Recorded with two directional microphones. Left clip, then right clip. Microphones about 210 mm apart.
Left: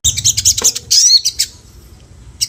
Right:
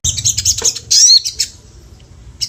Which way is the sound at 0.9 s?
10° left (ahead or behind).